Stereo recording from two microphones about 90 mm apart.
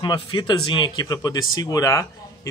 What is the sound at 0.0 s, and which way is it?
Speech, 60° left (ahead or behind).